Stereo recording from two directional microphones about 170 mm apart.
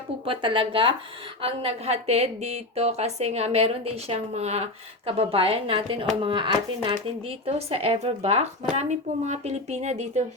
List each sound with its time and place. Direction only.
0.3 s a woman's voice: 30° right (ahead or behind)